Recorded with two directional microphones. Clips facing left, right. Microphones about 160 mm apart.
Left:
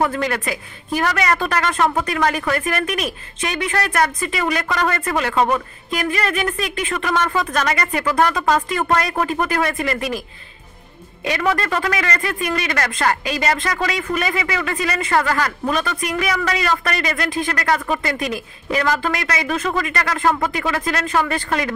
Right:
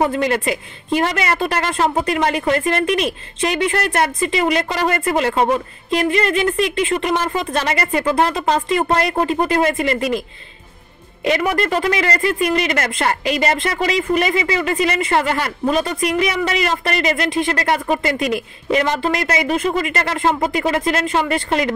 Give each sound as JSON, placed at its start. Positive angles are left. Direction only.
{"t": 0.0, "sound": "a woman's voice", "side_deg": -25}
{"t": 11.2, "sound": "a woman's voice", "side_deg": -25}